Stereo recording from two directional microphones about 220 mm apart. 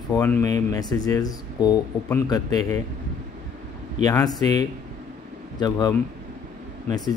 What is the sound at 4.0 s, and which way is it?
Speech, 15° left (ahead or behind).